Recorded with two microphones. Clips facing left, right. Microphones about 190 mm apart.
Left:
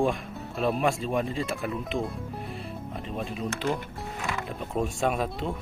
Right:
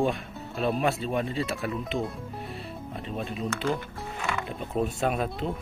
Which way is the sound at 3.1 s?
Centre (ahead or behind).